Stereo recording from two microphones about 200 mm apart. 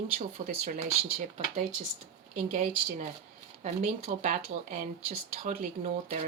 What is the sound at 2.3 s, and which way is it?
Speech, 35° right (ahead or behind).